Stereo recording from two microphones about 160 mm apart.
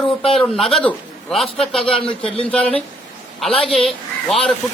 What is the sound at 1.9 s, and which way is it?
Speech, 35° left (ahead or behind).